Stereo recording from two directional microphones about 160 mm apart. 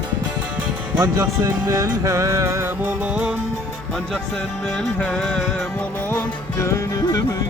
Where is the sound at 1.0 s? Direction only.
20° right (ahead or behind).